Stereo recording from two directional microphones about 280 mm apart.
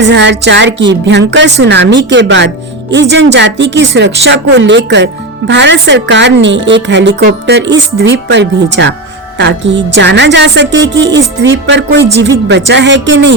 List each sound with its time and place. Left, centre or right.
0.0 s a woman's voice: right